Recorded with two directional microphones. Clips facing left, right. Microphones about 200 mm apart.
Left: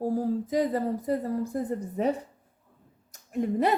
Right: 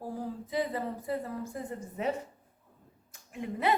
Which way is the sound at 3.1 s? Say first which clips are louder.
Left 10 dB; 40° left (ahead or behind).